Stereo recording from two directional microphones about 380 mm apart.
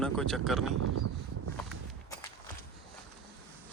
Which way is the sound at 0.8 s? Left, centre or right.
Right.